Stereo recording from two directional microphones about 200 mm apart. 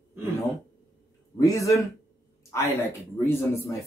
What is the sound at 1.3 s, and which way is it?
A man's voice, 15° left (ahead or behind).